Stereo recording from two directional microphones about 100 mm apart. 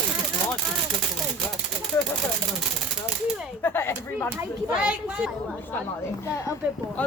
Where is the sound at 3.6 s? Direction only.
25° left (ahead or behind).